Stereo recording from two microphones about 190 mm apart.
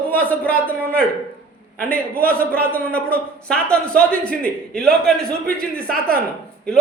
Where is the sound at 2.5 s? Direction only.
5° left (ahead or behind).